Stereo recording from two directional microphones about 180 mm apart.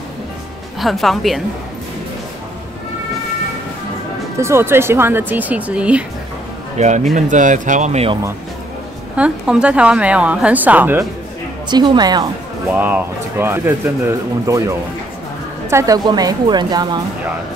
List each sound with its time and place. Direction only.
0.7 s speech: centre (ahead or behind)
4.4 s speech: 15° right (ahead or behind)
6.8 s speech: 40° right (ahead or behind)
9.1 s speech: 5° right (ahead or behind)
11.7 s a woman's voice: 25° right (ahead or behind)
12.6 s a woman's voice: 10° right (ahead or behind)